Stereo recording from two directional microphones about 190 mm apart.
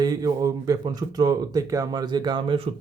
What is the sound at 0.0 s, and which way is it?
Speech, 20° right (ahead or behind).